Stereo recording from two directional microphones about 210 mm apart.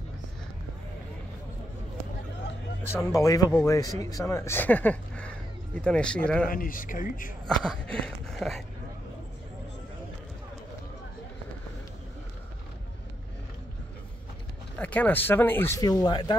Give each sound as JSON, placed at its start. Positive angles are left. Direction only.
{"t": 3.1, "sound": "speech", "side_deg": 15}
{"t": 6.5, "sound": "speech", "side_deg": 40}
{"t": 7.4, "sound": "a sound", "side_deg": 5}
{"t": 14.8, "sound": "speech", "side_deg": 5}